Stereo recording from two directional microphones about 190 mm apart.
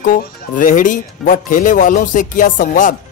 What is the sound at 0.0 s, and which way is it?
Speech, 45° left (ahead or behind).